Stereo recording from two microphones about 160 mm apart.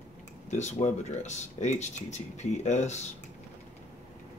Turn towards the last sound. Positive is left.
turn(degrees=45)  # may be behind; listen again after turning